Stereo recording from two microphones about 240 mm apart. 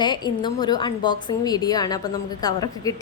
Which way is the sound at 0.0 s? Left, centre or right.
Centre.